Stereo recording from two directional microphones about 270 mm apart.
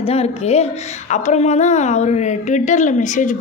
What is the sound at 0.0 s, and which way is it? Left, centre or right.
A woman's voice, left.